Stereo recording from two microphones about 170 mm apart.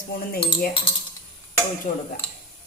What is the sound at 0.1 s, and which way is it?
Speech, 60° left (ahead or behind).